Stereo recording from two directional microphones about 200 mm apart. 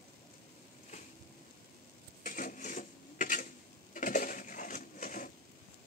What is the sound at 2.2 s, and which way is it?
Sewing machine, 40° left (ahead or behind).